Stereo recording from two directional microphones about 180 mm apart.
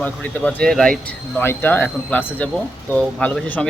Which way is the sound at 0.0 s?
10° left (ahead or behind).